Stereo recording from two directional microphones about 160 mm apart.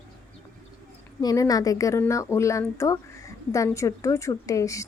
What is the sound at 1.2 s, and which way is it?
Speech, 25° left (ahead or behind).